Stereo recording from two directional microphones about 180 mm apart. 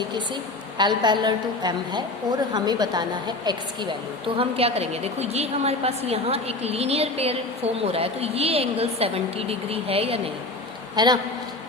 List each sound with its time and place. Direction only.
0.8 s a woman's voice: 25° right (ahead or behind)